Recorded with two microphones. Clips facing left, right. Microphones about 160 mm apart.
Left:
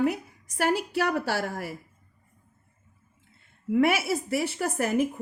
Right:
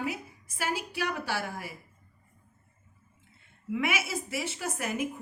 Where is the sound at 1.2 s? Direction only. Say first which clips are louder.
Left 5 dB; 45° left (ahead or behind).